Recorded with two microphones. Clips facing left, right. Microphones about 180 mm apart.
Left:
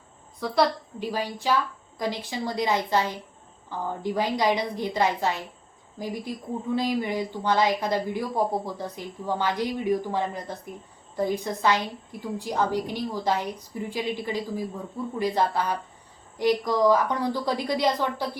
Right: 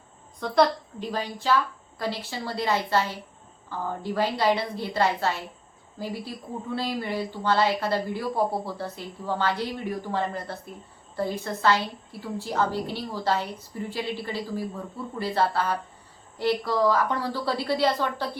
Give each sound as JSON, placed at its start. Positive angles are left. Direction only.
{"t": 0.3, "sound": "a woman's voice", "side_deg": 5}